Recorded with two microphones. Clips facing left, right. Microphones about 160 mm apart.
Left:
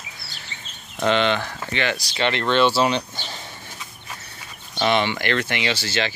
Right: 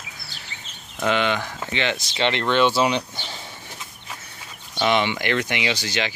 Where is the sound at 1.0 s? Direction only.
10° right (ahead or behind).